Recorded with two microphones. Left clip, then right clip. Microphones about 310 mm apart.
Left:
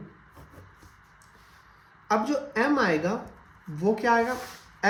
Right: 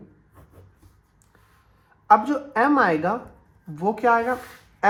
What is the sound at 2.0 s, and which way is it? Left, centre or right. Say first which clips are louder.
A woman's voice: right 8 dB; centre.